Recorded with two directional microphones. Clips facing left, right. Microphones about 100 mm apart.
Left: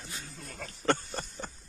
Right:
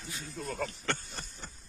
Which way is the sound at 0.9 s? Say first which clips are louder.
Left 7 dB; 40° left (ahead or behind).